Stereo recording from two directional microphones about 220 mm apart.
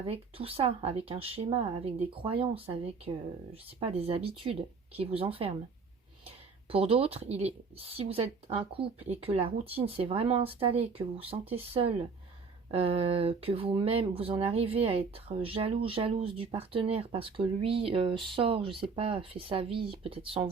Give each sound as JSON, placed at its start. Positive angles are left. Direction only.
{"t": 0.0, "sound": "speech", "side_deg": -25}
{"t": 6.7, "sound": "speech", "side_deg": -25}